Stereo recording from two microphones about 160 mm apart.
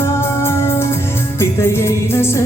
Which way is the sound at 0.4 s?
15° left (ahead or behind).